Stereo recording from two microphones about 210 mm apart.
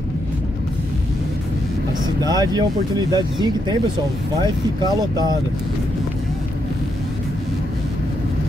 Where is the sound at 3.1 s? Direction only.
20° right (ahead or behind).